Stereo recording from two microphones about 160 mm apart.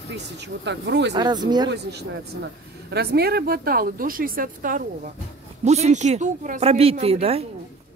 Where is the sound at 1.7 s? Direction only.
90° right; by 4.8 s 60° right (ahead or behind).